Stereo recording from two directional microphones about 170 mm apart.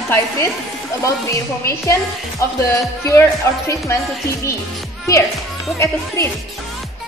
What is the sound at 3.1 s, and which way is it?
Speech, 15° left (ahead or behind).